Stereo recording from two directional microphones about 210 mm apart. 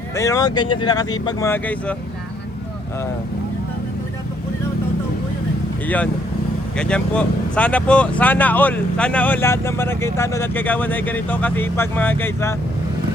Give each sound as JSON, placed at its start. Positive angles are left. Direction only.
{"t": 0.2, "sound": "speech", "side_deg": 15}
{"t": 5.8, "sound": "speech", "side_deg": 5}